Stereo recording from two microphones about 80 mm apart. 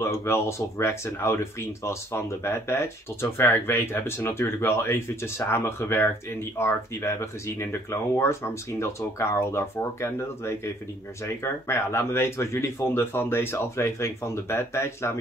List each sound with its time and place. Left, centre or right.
0.0 s speech: left